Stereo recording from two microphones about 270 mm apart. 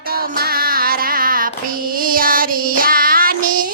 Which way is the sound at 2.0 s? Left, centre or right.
Right.